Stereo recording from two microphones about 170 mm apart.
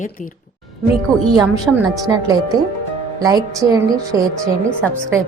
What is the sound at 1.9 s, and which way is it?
Speech, 20° right (ahead or behind).